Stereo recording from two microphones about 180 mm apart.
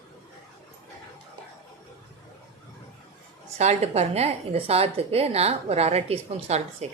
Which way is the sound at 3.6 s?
35° right (ahead or behind).